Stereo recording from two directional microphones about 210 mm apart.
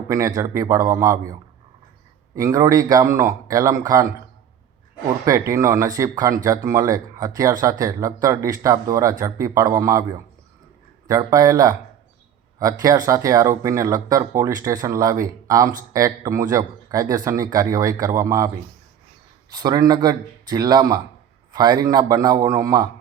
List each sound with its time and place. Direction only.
0.1 s speech: 15° right (ahead or behind)
5.2 s speech: 15° right (ahead or behind)
11.1 s speech: 15° right (ahead or behind)
12.8 s speech: 15° right (ahead or behind)